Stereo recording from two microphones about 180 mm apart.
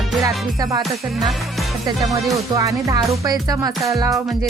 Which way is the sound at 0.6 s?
20° right (ahead or behind).